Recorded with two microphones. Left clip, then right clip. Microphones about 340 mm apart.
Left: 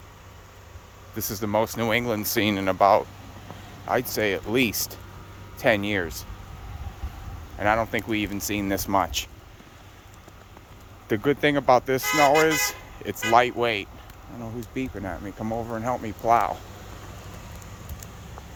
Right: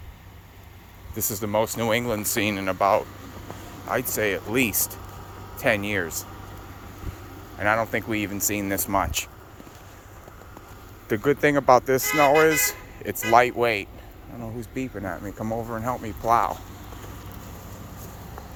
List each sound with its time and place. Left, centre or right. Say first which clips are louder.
1.1 s speech: even; centre
7.6 s speech: even; centre
11.1 s speech: right 1 dB; centre